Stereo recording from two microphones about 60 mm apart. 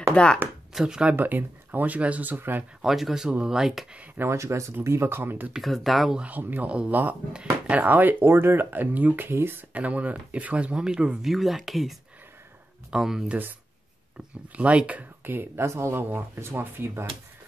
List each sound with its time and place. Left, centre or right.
0.1 s speech: centre
0.7 s speech: centre
1.1 s speech: right
2.8 s speech: centre
4.2 s speech: right
5.6 s speech: centre
6.1 s speech: right
9.8 s speech: right
11.3 s speech: centre
13.3 s speech: right
15.2 s speech: right